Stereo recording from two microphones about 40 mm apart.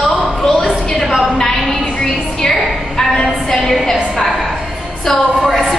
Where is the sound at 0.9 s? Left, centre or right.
Centre.